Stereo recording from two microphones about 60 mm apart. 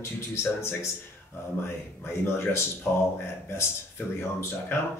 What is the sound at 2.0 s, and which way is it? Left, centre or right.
Speech, left.